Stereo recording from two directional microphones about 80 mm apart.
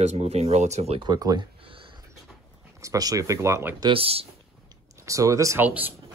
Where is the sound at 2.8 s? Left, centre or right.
Right.